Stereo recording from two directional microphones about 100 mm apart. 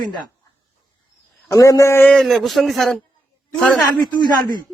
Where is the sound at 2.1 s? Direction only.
5° left (ahead or behind).